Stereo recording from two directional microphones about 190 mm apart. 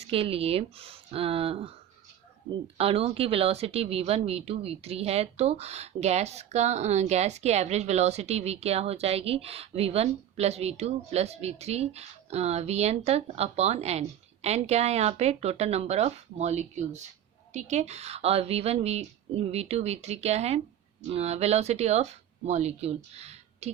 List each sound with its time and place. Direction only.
0.1 s speech: 30° right (ahead or behind)
2.7 s speech: 30° right (ahead or behind)